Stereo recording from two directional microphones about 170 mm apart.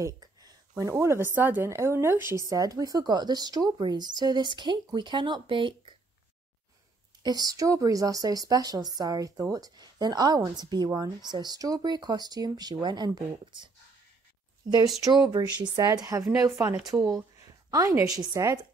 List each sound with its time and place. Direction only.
0.0 s a woman's voice: 20° right (ahead or behind)
7.2 s a woman's voice: 20° right (ahead or behind)
15.3 s a woman's voice: 25° right (ahead or behind)
17.4 s a sound: 20° right (ahead or behind)
18.1 s a woman's voice: 20° right (ahead or behind)